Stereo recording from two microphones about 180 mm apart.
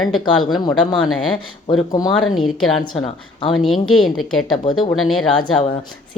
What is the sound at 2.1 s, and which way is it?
A woman's voice, centre (ahead or behind).